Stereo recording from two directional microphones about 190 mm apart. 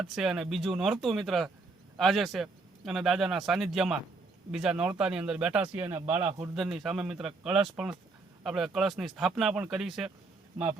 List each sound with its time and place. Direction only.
0.0 s speech: centre (ahead or behind)